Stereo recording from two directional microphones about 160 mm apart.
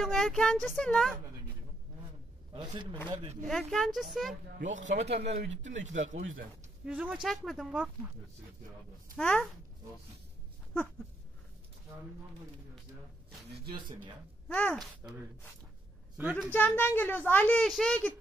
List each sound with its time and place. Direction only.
0.0 s speech: centre (ahead or behind)
2.5 s a man's voice: 30° right (ahead or behind)
3.4 s speech: centre (ahead or behind)
5.0 s a man's voice: 40° right (ahead or behind)
6.9 s a woman's voice: 10° right (ahead or behind)
9.1 s a child's voice: 5° left (ahead or behind)
14.5 s a child's voice: 10° left (ahead or behind)
16.2 s a woman's voice: 10° right (ahead or behind)
16.5 s a child's voice: 10° left (ahead or behind)